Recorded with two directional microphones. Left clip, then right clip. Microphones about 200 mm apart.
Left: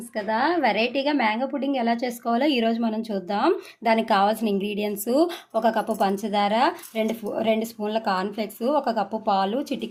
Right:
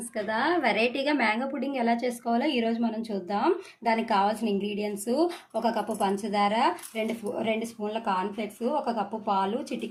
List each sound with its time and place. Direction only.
0.3 s a woman's voice: 25° left (ahead or behind)